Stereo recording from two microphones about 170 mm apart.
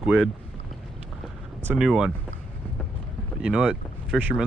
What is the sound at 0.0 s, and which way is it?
Speech, 5° right (ahead or behind).